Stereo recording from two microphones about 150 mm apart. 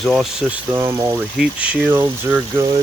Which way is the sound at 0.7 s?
20° right (ahead or behind).